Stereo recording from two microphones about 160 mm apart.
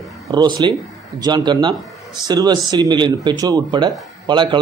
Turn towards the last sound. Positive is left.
turn(degrees=-30)  # may be behind; listen again after turning